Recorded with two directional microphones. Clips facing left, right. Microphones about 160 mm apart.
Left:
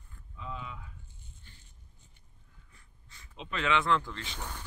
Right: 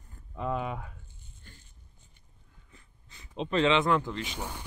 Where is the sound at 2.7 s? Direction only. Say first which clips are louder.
Right 5 dB; 20° right (ahead or behind).